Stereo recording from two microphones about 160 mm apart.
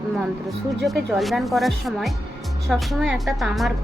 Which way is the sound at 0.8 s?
Centre (ahead or behind).